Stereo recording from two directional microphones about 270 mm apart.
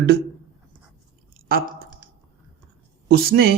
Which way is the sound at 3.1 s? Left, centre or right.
Right.